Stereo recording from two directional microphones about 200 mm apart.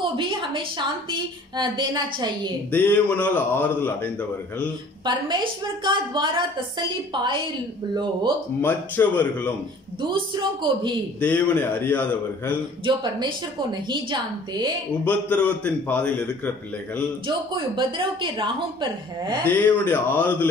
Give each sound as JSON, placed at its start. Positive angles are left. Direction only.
{"t": 0.2, "sound": "a woman's voice", "side_deg": -25}
{"t": 2.7, "sound": "a man's voice", "side_deg": 10}
{"t": 5.0, "sound": "a woman's voice", "side_deg": -25}
{"t": 8.5, "sound": "a man's voice", "side_deg": 10}
{"t": 10.0, "sound": "a woman's voice", "side_deg": -25}
{"t": 11.1, "sound": "a man's voice", "side_deg": 5}
{"t": 12.8, "sound": "a woman's voice", "side_deg": -20}
{"t": 15.0, "sound": "a man's voice", "side_deg": 10}
{"t": 17.3, "sound": "a woman's voice", "side_deg": -25}
{"t": 19.4, "sound": "a man's voice", "side_deg": 10}